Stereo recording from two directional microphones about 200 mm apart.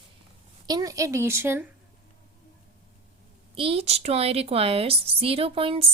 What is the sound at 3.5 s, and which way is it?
A woman's voice, 30° right (ahead or behind).